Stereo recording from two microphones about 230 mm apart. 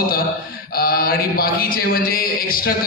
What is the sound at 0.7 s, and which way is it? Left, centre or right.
A man's voice, left.